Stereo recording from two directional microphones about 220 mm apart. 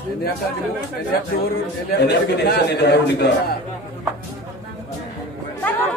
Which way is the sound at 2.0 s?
45° left (ahead or behind).